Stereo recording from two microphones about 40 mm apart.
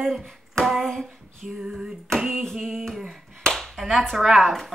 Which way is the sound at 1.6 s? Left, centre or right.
Centre.